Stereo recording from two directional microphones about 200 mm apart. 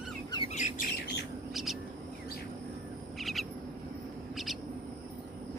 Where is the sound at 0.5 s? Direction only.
35° left (ahead or behind).